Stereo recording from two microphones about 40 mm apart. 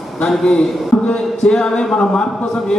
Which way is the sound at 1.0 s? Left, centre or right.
Left.